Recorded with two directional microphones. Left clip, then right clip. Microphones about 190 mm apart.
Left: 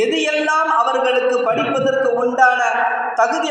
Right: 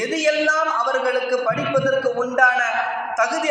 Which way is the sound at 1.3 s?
25° right (ahead or behind).